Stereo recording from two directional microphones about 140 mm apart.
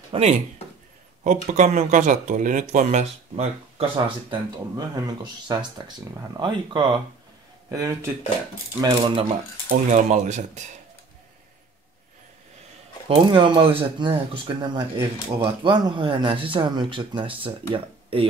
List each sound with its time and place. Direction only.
0.1 s speech: 50° right (ahead or behind)
1.2 s speech: 60° right (ahead or behind); by 4.4 s 40° right (ahead or behind)
4.7 s speech: 25° right (ahead or behind)
7.7 s speech: 25° right (ahead or behind)
9.7 s speech: 60° right (ahead or behind)
13.1 s speech: 35° right (ahead or behind)